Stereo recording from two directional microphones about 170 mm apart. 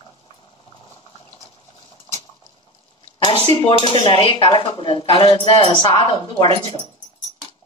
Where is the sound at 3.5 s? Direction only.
35° right (ahead or behind).